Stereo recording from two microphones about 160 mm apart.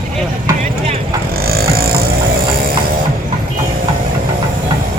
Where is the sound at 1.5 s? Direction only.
70° right (ahead or behind).